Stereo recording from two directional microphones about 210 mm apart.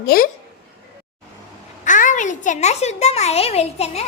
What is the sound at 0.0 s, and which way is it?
Speech, 45° left (ahead or behind).